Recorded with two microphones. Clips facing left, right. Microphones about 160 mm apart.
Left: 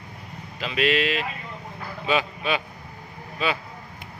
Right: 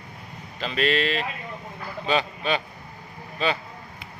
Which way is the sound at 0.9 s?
5° left (ahead or behind).